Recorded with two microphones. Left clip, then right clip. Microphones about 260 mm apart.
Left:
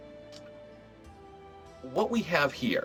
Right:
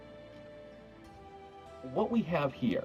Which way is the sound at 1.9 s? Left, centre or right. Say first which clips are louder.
Left 4 dB; left.